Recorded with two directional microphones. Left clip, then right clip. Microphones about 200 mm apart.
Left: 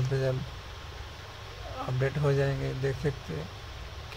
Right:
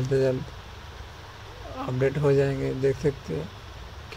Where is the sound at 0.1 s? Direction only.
25° right (ahead or behind).